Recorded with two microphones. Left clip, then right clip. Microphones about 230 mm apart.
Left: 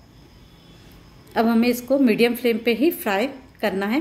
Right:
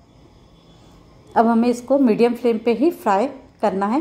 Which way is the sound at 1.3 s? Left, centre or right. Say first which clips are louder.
Right 3 dB; centre.